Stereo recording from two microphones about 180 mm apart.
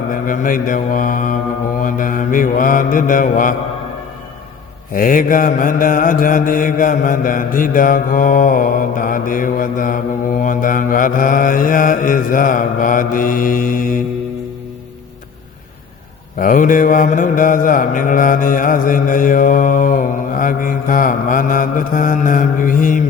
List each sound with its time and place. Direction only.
0.1 s mantra: 50° left (ahead or behind)
4.9 s mantra: 50° left (ahead or behind)
16.4 s mantra: 45° left (ahead or behind)